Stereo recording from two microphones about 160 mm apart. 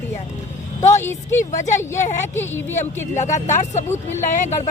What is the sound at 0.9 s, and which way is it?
Speech, 15° left (ahead or behind).